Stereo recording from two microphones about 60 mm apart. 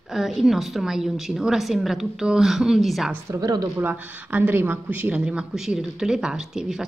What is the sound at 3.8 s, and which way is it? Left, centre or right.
Speech, right.